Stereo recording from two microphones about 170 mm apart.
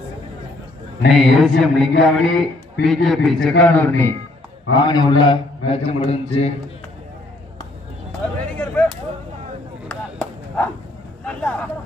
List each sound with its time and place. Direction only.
1.1 s a sound: centre (ahead or behind)
3.6 s a man's voice: 10° left (ahead or behind)
4.7 s a man's voice: 25° left (ahead or behind)
8.5 s a sound: 10° left (ahead or behind)
9.9 s chop: 5° left (ahead or behind)
11.3 s vehicle: 5° left (ahead or behind)